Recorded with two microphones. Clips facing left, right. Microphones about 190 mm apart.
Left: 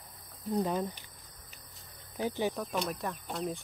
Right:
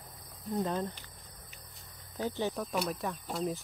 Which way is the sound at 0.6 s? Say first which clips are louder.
Left 1 dB; 10° left (ahead or behind).